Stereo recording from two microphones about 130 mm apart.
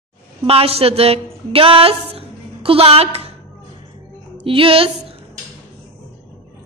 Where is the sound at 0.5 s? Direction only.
50° right (ahead or behind).